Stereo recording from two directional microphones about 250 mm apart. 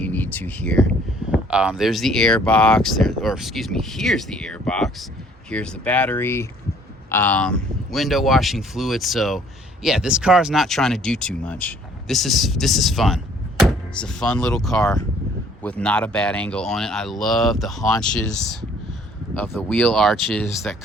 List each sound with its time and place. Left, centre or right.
0.0 s speech: centre
19.4 s speech: centre